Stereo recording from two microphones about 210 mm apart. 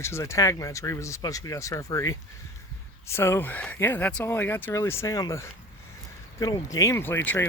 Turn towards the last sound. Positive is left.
turn(degrees=10)  # may be behind; listen again after turning